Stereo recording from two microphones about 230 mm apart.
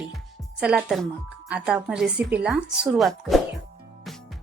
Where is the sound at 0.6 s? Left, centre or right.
Centre.